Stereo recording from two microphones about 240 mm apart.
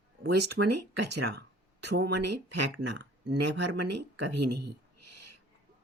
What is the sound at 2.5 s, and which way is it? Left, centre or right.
Speech, right.